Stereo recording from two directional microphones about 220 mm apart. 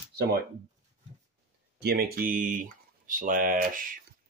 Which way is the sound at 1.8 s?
45° right (ahead or behind).